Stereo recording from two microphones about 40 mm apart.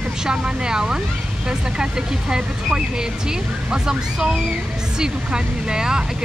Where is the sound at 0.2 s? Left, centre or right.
Right.